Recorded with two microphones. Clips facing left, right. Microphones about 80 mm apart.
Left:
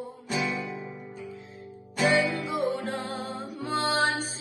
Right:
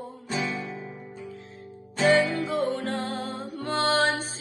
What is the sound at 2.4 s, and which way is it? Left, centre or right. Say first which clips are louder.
Music: right 2 dB; centre.